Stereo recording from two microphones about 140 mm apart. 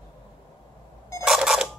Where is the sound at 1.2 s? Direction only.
5° right (ahead or behind).